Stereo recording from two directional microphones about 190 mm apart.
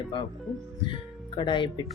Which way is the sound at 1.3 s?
25° left (ahead or behind).